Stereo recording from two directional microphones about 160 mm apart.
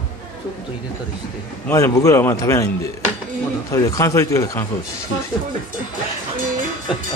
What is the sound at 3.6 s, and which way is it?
Speech, 20° left (ahead or behind).